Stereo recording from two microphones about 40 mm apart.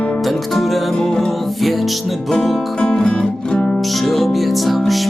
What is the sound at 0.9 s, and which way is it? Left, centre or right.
Music, centre.